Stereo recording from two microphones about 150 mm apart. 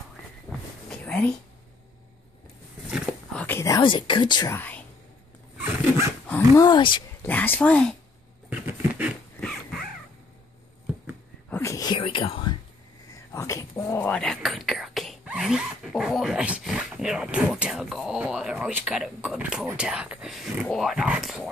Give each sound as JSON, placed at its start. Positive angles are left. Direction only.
{"t": 0.5, "sound": "a sound", "side_deg": 5}
{"t": 3.3, "sound": "a sound", "side_deg": 15}
{"t": 3.9, "sound": "speech", "side_deg": 35}
{"t": 4.5, "sound": "speech", "side_deg": 10}
{"t": 6.2, "sound": "dog", "side_deg": 10}
{"t": 6.6, "sound": "speech", "side_deg": 30}
{"t": 7.2, "sound": "speech", "side_deg": 10}
{"t": 8.5, "sound": "a sound", "side_deg": -10}
{"t": 9.4, "sound": "crow", "side_deg": 5}
{"t": 11.5, "sound": "whispering", "side_deg": 20}
{"t": 12.0, "sound": "whispering", "side_deg": 35}
{"t": 13.3, "sound": "speech", "side_deg": 20}